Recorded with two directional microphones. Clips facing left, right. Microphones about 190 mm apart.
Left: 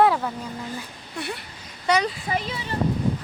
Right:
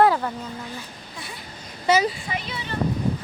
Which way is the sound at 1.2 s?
65° left (ahead or behind).